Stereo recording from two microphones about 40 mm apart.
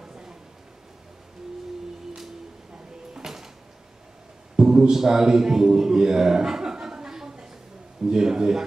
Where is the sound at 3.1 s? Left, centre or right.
Centre.